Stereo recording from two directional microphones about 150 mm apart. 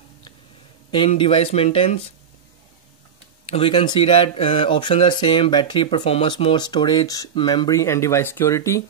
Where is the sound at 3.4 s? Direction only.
40° left (ahead or behind); by 8.8 s 20° left (ahead or behind).